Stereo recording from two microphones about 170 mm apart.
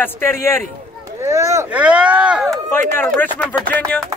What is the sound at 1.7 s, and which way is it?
Speech, 5° right (ahead or behind).